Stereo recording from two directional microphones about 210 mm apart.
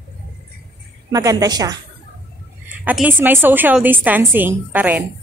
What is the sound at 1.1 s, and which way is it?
Speech, 15° right (ahead or behind).